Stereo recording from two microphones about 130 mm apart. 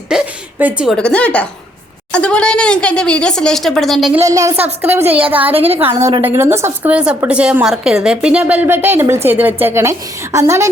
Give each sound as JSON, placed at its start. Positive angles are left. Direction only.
{"t": 0.1, "sound": "a sound", "side_deg": -10}
{"t": 0.9, "sound": "speech", "side_deg": 10}
{"t": 4.2, "sound": "a woman's voice", "side_deg": -25}